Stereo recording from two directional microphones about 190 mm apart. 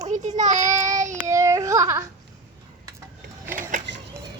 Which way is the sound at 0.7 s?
15° right (ahead or behind).